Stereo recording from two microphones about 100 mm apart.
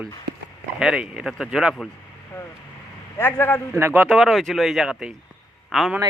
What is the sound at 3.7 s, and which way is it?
Speech, 20° right (ahead or behind).